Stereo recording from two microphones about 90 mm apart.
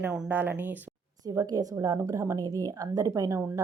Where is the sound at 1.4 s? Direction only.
40° right (ahead or behind).